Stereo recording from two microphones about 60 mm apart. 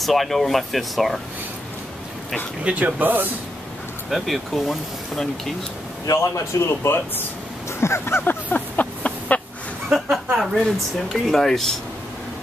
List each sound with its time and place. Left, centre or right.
0.0 s speech: centre
2.6 s speech: right
4.1 s speech: centre
6.0 s speech: left
6.6 s speech: left
7.8 s a sound: left
9.9 s a sound: centre
10.3 s speech: centre